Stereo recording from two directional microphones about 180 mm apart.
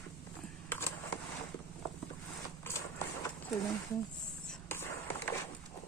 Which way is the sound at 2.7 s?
15° left (ahead or behind).